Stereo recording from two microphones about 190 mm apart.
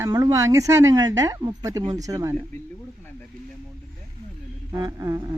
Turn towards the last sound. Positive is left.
turn(degrees=-20)  # may be behind; listen again after turning